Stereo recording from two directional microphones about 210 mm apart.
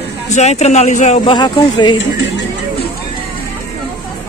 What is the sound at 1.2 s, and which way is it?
Speech, 20° left (ahead or behind).